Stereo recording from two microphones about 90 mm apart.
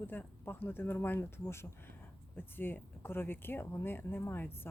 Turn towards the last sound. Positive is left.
turn(degrees=20)  # may be behind; listen again after turning